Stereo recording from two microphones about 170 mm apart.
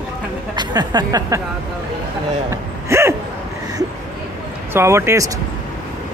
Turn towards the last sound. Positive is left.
turn(degrees=-15)  # may be behind; listen again after turning